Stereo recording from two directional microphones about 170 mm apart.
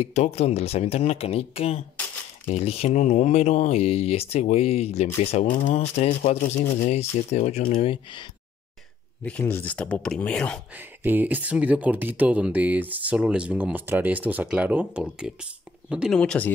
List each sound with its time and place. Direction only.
0.0 s speech: 40° left (ahead or behind)
9.2 s speech: 10° left (ahead or behind)
10.7 s speech: 10° right (ahead or behind)
16.2 s speech: 5° left (ahead or behind)